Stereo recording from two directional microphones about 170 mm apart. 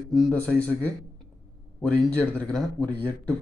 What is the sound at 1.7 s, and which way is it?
Speech, 10° left (ahead or behind).